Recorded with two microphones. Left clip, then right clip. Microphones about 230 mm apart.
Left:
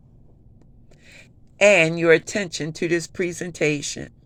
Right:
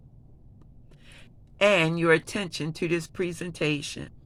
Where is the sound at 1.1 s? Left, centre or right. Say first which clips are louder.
Left 6 dB; right.